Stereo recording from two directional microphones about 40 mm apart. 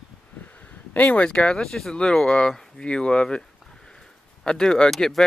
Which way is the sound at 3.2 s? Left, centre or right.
Centre.